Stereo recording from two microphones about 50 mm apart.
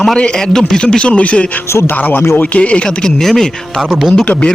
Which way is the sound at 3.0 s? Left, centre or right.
Centre.